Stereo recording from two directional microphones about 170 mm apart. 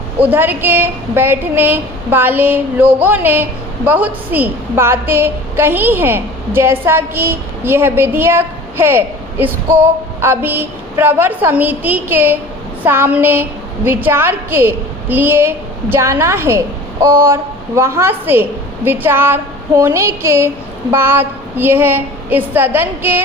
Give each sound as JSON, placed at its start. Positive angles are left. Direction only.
{"t": 0.2, "sound": "a woman's voice", "side_deg": -10}